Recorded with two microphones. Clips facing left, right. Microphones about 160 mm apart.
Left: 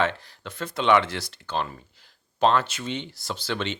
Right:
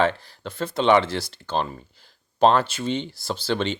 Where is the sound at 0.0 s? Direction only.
30° right (ahead or behind).